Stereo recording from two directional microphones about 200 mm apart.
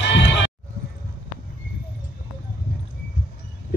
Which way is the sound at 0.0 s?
60° left (ahead or behind).